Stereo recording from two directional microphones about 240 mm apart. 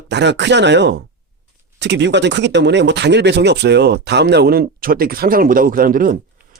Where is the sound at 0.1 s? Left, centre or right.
Right.